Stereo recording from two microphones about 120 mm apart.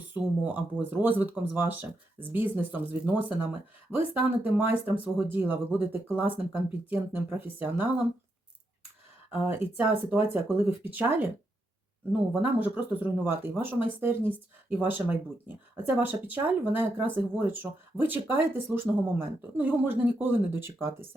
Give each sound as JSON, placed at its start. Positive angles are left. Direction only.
{"t": 0.1, "sound": "speech", "side_deg": -15}
{"t": 9.3, "sound": "speech", "side_deg": -15}
{"t": 12.4, "sound": "speech", "side_deg": -15}